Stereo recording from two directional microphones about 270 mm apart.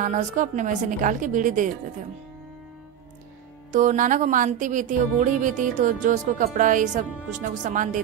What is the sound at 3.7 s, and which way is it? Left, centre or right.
Music, right.